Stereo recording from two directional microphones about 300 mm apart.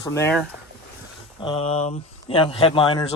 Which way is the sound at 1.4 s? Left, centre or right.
Centre.